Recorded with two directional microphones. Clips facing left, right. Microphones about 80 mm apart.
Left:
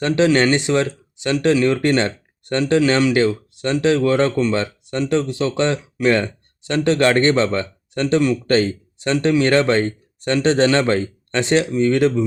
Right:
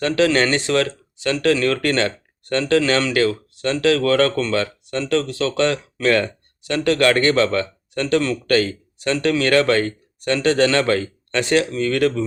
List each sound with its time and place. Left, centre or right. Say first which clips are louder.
0.3 s speech: left 2 dB; centre